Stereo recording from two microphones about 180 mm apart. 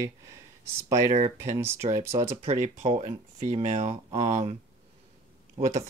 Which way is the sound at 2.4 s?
35° right (ahead or behind).